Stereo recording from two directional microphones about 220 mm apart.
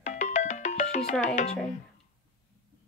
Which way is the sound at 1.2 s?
35° left (ahead or behind).